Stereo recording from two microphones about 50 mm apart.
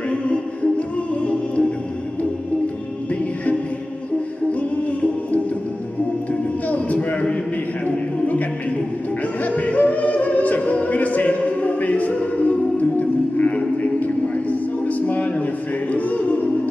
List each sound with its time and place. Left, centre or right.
0.3 s music: left
6.7 s a sound: left
9.6 s music: left